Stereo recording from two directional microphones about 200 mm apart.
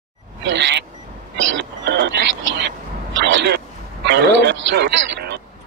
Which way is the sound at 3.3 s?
55° right (ahead or behind).